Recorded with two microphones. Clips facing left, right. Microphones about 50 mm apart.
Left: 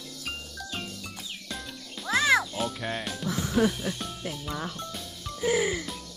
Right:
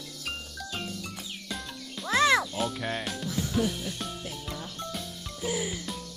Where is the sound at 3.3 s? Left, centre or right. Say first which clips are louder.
Left 4 dB; left.